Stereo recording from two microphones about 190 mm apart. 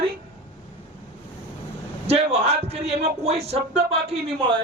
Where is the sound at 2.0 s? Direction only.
30° right (ahead or behind).